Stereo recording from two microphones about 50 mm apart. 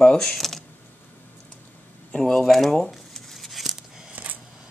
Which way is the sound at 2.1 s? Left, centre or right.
Centre.